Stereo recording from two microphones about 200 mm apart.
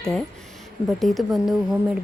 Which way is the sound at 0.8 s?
Centre (ahead or behind).